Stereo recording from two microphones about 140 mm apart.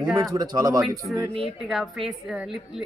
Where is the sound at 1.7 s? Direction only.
Centre (ahead or behind).